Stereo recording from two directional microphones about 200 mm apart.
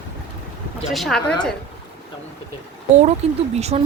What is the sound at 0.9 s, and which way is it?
Speech, centre (ahead or behind).